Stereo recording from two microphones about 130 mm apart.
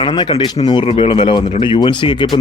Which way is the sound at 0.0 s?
40° left (ahead or behind).